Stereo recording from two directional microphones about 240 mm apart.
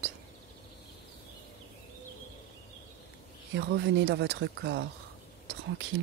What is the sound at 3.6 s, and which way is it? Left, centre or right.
Speech, right.